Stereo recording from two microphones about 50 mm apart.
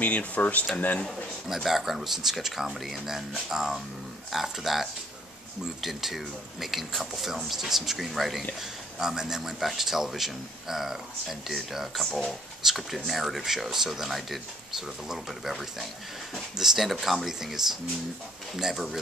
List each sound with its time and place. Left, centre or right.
0.0 s speech: left
1.0 s speech: centre
8.5 s speech: centre